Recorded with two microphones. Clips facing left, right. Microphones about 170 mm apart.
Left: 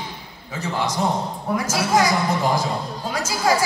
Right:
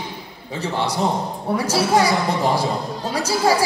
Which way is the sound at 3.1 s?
30° right (ahead or behind).